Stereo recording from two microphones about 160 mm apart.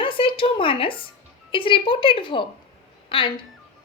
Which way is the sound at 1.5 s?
30° left (ahead or behind).